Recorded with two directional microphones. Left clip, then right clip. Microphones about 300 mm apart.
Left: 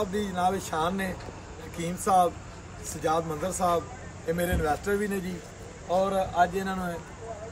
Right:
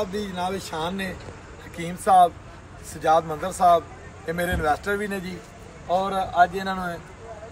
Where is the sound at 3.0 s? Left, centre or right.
Centre.